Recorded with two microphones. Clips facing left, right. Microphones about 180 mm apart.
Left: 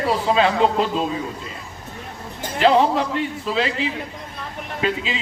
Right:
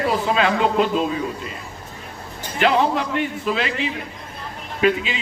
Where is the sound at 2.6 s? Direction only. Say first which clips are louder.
Left 2 dB; 30° left (ahead or behind).